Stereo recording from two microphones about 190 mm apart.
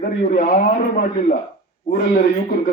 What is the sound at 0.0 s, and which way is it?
Speech, 50° left (ahead or behind).